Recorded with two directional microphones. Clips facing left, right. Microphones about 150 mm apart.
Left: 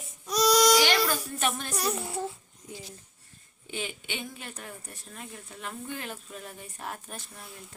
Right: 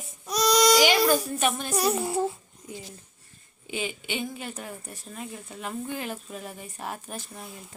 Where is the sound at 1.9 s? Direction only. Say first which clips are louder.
Right 7 dB; 35° right (ahead or behind).